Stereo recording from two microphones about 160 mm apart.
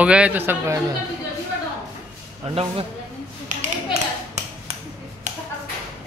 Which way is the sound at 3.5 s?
50° right (ahead or behind).